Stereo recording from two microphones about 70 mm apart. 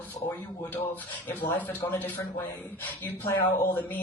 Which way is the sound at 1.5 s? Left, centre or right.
Left.